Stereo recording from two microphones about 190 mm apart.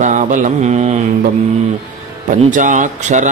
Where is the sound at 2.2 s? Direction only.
40° right (ahead or behind).